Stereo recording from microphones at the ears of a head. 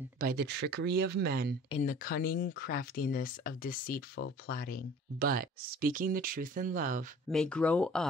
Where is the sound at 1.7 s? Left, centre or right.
Left.